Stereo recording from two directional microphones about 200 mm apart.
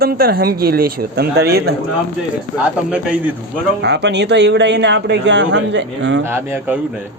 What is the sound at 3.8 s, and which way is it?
A man's voice, 60° right (ahead or behind).